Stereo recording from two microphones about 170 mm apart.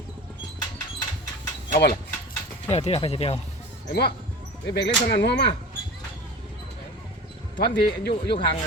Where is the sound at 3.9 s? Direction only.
70° left (ahead or behind).